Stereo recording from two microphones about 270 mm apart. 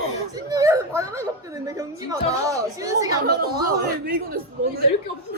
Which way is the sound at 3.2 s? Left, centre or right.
Right.